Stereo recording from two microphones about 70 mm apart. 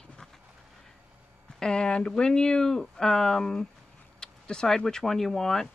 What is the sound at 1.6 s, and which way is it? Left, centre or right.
Speech, centre.